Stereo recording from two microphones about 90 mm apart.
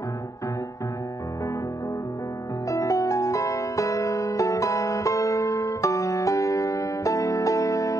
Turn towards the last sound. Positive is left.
turn(degrees=35)  # may be behind; listen again after turning